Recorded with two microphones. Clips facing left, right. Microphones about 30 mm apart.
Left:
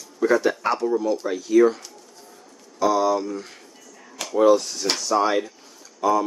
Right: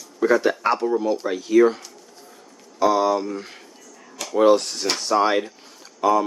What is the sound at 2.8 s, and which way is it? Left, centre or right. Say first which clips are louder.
Speech: right 1 dB; right.